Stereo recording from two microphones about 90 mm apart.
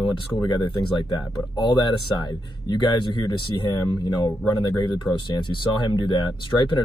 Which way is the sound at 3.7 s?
50° left (ahead or behind).